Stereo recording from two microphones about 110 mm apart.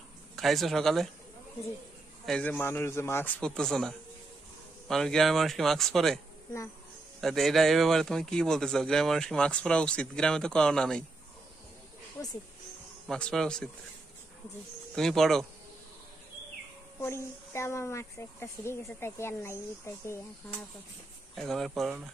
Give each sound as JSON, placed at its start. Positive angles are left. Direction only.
{"t": 0.4, "sound": "speech", "side_deg": 0}
{"t": 2.2, "sound": "speech", "side_deg": 10}
{"t": 3.3, "sound": "speech", "side_deg": 5}
{"t": 7.2, "sound": "speech", "side_deg": 0}
{"t": 13.1, "sound": "speech", "side_deg": 5}
{"t": 15.0, "sound": "speech", "side_deg": 5}
{"t": 17.0, "sound": "speech", "side_deg": 25}
{"t": 21.4, "sound": "speech", "side_deg": 0}